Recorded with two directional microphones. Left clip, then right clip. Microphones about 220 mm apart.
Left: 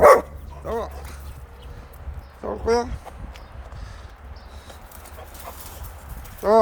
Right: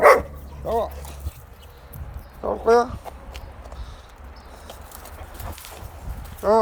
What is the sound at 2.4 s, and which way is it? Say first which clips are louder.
Dog: right 4 dB; 10° left (ahead or behind).